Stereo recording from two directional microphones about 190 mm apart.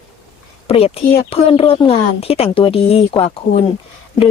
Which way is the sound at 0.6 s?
30° left (ahead or behind).